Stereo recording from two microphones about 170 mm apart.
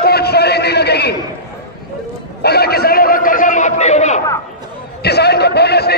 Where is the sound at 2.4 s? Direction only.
70° left (ahead or behind); by 4.2 s 40° left (ahead or behind).